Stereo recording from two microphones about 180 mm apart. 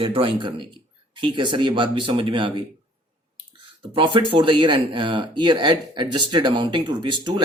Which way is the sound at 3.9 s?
30° right (ahead or behind).